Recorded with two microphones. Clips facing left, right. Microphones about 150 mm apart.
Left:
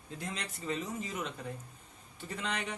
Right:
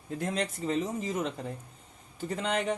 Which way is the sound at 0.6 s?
35° right (ahead or behind).